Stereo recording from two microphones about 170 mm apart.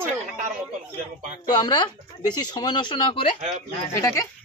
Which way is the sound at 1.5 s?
25° left (ahead or behind).